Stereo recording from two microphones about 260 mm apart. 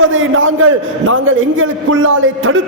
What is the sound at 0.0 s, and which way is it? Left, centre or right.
A man's voice, right.